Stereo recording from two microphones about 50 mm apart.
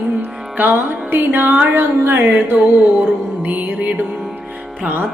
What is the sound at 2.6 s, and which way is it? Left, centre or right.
Music, right.